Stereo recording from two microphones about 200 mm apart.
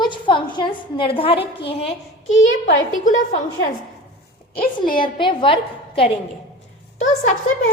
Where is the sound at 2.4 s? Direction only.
75° left (ahead or behind).